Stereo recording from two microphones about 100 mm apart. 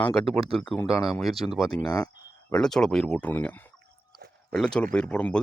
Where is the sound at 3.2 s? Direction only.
15° left (ahead or behind).